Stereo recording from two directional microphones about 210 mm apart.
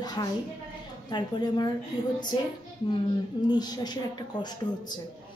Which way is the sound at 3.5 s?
20° left (ahead or behind).